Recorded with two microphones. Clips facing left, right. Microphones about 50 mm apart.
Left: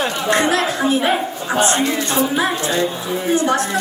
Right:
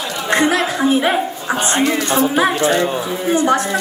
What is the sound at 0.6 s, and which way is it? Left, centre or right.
Speech, centre.